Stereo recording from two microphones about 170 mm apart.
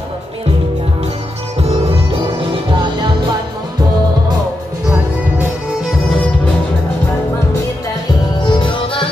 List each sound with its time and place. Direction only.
2.5 s music: 30° right (ahead or behind)
8.4 s music: 30° left (ahead or behind)